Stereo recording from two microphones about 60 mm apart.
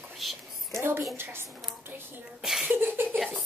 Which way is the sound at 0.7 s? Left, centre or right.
Right.